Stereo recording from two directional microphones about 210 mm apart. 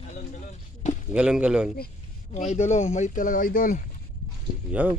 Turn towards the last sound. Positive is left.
turn(degrees=-5)  # may be behind; listen again after turning